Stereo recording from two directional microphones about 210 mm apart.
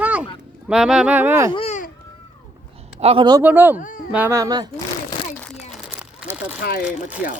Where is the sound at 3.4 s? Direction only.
10° right (ahead or behind).